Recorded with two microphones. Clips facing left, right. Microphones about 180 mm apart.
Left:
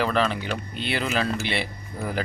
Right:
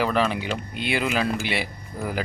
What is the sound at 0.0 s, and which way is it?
Speech, 10° right (ahead or behind).